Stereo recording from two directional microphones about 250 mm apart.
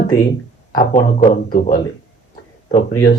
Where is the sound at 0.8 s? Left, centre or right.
Left.